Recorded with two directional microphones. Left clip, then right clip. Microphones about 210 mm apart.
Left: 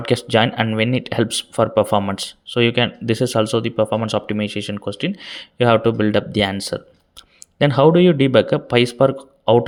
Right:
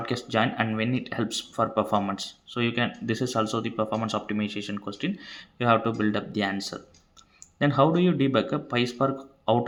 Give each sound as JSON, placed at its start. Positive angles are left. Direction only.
{"t": 0.0, "sound": "speech", "side_deg": 40}